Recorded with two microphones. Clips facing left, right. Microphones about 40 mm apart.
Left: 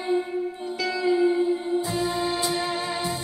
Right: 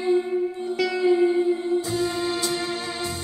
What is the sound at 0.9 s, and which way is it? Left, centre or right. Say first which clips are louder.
Music: right 2 dB; right.